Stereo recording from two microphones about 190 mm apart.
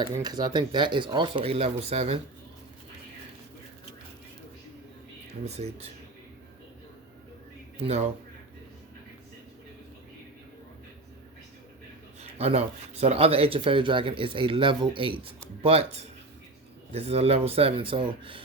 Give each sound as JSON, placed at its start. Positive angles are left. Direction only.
{"t": 0.0, "sound": "speech", "side_deg": -20}
{"t": 5.5, "sound": "speech", "side_deg": -35}
{"t": 7.8, "sound": "speech", "side_deg": -35}
{"t": 12.2, "sound": "speech", "side_deg": -35}